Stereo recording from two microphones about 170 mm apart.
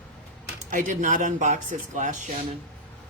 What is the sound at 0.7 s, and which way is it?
Speech, 50° right (ahead or behind).